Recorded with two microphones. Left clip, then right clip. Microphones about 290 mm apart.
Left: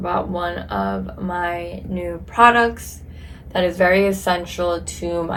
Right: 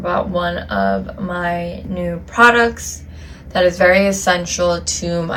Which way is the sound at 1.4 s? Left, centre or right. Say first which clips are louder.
Right 4 dB; left.